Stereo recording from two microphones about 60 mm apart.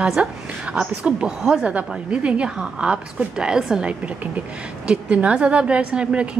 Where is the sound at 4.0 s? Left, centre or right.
Right.